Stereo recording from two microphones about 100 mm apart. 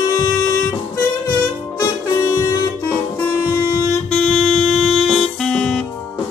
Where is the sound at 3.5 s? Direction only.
35° left (ahead or behind).